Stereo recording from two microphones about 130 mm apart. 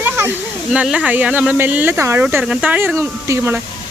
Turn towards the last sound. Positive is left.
turn(degrees=-20)  # may be behind; listen again after turning